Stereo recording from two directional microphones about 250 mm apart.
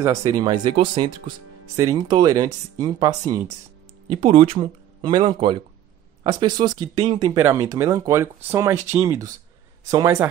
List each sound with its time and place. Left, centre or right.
0.0 s speech: centre